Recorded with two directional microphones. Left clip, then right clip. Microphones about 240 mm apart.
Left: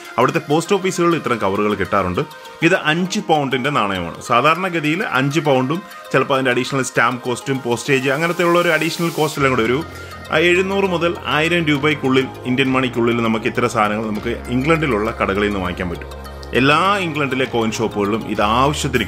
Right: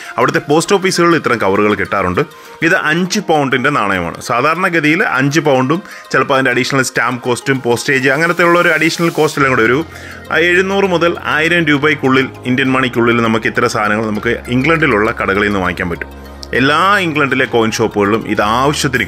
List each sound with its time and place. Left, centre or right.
0.1 s speech: right